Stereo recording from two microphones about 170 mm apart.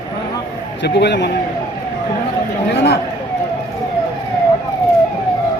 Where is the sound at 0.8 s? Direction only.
85° left.